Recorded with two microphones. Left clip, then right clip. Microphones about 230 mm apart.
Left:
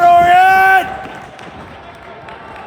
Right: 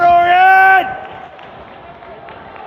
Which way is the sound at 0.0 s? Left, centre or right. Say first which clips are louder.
Left 1 dB; centre.